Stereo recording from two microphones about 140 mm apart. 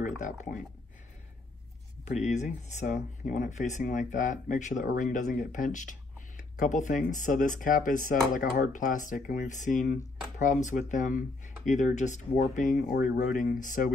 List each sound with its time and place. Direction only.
0.0 s speech: 60° left (ahead or behind)
2.2 s speech: 55° left (ahead or behind); by 13.9 s 80° left